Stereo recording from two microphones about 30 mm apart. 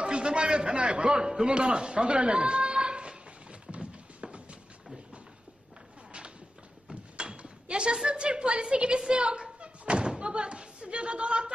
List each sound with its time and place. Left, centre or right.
0.0 s a man's voice: right
1.4 s a sound: right
7.2 s speech: right
9.1 s thump: right